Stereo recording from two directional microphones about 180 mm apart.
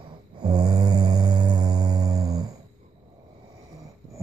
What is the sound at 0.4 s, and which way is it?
Music, 25° right (ahead or behind).